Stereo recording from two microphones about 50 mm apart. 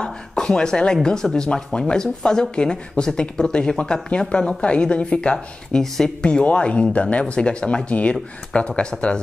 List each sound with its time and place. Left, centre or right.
0.0 s a sound: centre
1.0 s speech: centre
6.4 s speech: left